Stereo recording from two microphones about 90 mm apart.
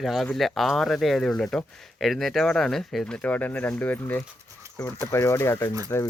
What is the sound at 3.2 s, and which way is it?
Speech, 20° left (ahead or behind).